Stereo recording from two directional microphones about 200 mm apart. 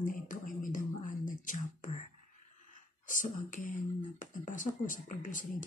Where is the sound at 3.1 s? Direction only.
40° left (ahead or behind).